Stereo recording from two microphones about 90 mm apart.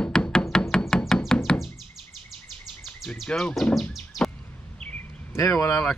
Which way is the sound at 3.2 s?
10° left (ahead or behind).